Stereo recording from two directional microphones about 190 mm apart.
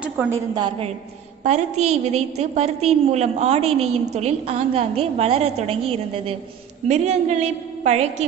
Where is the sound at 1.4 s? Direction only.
35° right (ahead or behind).